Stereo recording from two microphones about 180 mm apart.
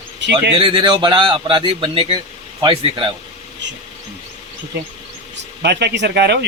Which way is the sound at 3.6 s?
80° right.